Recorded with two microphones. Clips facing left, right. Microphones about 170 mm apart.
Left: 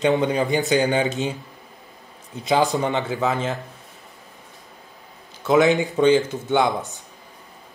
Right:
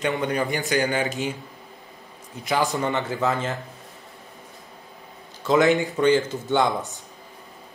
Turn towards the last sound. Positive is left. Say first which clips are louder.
# left 2 dB
turn(degrees=10)  # may be behind; listen again after turning